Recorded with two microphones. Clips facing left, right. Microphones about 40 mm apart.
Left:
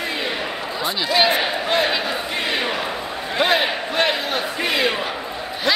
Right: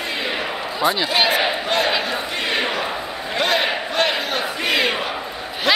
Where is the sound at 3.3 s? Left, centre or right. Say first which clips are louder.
Left 1 dB; centre.